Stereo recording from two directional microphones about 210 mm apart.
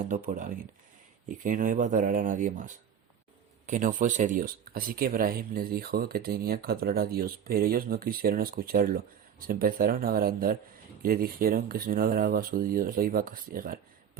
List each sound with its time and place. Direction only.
0.0 s speech: 40° right (ahead or behind)